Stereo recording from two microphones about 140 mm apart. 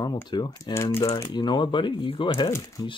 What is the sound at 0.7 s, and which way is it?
Speech, 20° left (ahead or behind).